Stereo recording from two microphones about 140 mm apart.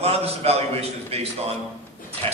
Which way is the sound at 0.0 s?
45° right (ahead or behind).